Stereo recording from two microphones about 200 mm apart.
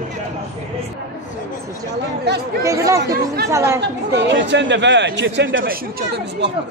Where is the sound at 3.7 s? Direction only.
60° right (ahead or behind).